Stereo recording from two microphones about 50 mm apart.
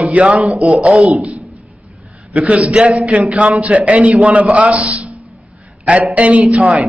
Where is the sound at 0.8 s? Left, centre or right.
Centre.